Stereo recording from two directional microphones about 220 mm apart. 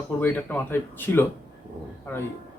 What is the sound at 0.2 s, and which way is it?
Speech, 10° left (ahead or behind).